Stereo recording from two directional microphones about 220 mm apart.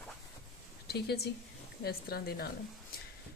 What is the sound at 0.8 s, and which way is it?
A woman's voice, 45° left (ahead or behind).